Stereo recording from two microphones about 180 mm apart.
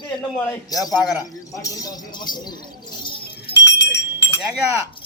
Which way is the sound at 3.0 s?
25° left (ahead or behind).